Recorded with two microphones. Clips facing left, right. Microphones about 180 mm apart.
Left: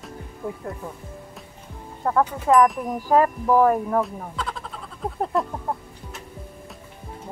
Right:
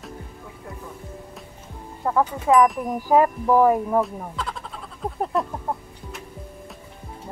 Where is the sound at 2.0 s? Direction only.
Centre (ahead or behind).